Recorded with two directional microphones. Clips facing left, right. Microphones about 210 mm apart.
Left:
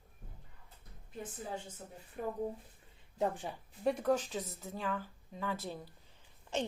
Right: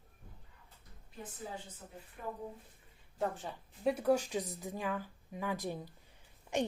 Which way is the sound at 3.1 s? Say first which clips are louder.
Left 2 dB; 15° left (ahead or behind).